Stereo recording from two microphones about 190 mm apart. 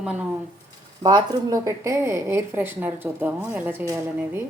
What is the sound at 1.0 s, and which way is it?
A woman's voice, 20° right (ahead or behind).